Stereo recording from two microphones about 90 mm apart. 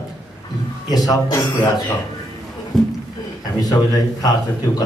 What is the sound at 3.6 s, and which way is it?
Speech, 45° left (ahead or behind).